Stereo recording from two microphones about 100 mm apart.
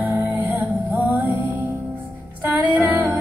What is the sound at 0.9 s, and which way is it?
Music, 15° right (ahead or behind).